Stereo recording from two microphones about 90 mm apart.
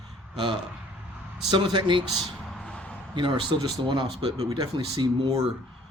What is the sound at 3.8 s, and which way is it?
Speech, 65° right (ahead or behind).